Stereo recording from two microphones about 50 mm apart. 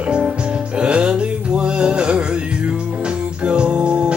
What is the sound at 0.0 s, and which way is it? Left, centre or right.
Music, right.